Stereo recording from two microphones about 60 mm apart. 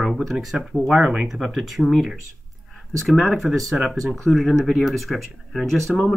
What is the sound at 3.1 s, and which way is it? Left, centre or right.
Speech, centre.